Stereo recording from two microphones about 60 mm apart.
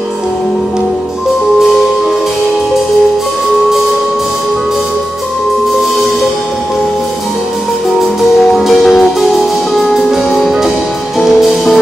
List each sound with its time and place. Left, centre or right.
8.0 s music: centre